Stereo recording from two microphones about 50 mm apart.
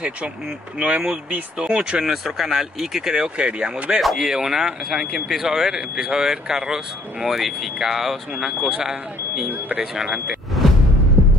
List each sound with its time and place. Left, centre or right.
0.7 s speech: centre